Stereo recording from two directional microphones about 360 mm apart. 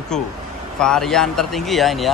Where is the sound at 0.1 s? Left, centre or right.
Centre.